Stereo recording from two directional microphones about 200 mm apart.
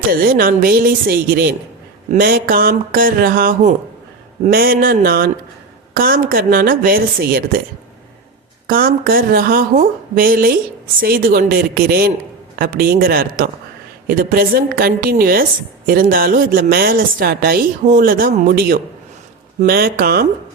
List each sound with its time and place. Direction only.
0.1 s a woman's voice: 45° right (ahead or behind)
8.6 s a woman's voice: 45° right (ahead or behind)